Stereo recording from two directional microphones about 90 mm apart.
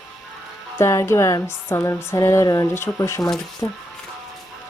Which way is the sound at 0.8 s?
30° left (ahead or behind).